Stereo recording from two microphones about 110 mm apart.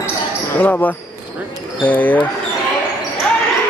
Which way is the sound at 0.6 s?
15° left (ahead or behind).